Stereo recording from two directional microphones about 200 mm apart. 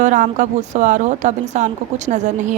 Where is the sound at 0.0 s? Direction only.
35° right (ahead or behind).